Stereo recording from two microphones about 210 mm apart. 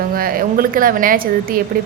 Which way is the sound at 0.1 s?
45° right (ahead or behind).